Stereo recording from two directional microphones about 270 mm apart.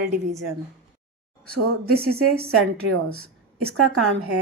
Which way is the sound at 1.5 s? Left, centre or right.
Right.